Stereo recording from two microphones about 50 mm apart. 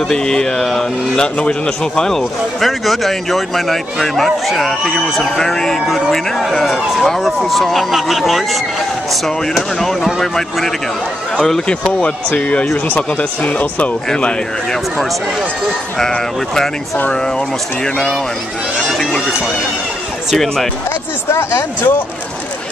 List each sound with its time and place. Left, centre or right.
0.1 s speech: centre
5.9 s speech: centre
12.0 s speech: left
14.1 s speech: centre
18.9 s speech: centre
20.2 s speech: centre
21.3 s speech: left